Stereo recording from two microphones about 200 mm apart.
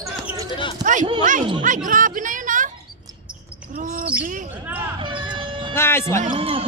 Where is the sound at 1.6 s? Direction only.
40° right (ahead or behind).